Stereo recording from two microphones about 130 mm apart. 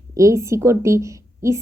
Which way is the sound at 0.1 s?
25° right (ahead or behind).